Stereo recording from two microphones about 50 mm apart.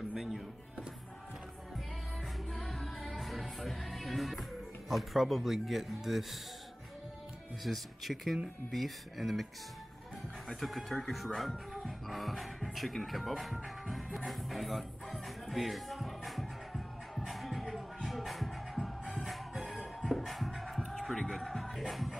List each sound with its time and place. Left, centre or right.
0.1 s music: centre
2.5 s music: centre
7.6 s speech: centre
10.5 s speech: centre
11.3 s music: centre